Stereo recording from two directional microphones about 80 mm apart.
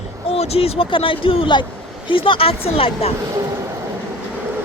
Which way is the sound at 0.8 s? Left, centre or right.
Left.